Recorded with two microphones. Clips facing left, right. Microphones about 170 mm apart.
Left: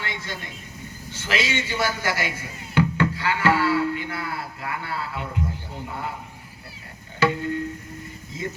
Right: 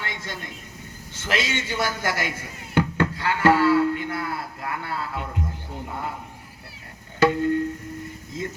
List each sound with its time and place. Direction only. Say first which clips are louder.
0.1 s a sound: left 1 dB; 50° right (ahead or behind)
1.1 s a man's voice: even; 50° right (ahead or behind)
2.7 s music: left 1 dB; 50° right (ahead or behind)
7.2 s music: right 4 dB; 50° right (ahead or behind)